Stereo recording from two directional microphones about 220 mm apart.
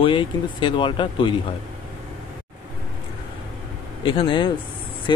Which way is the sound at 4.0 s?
20° left (ahead or behind).